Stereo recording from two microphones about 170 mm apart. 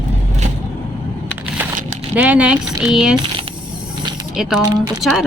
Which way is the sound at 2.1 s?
10° right (ahead or behind).